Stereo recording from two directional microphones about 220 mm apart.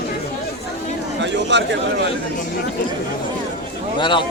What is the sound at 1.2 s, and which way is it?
Speech, 55° right (ahead or behind).